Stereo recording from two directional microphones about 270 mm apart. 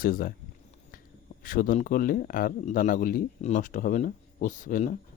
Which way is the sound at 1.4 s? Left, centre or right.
Left.